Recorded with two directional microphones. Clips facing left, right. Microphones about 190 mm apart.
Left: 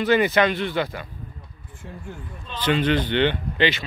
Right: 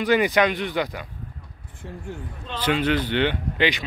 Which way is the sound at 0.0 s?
15° right (ahead or behind).